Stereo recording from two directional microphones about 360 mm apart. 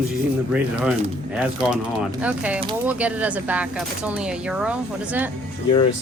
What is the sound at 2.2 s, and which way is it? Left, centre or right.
Speech, centre.